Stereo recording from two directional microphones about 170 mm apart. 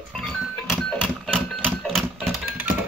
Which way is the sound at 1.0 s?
Centre (ahead or behind).